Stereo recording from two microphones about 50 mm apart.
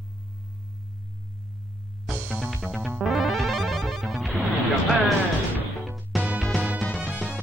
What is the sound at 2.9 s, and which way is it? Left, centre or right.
Music, centre.